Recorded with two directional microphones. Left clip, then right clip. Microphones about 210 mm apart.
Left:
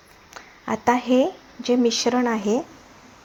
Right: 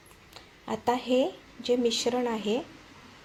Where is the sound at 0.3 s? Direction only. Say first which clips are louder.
Left 7 dB; 20° left (ahead or behind).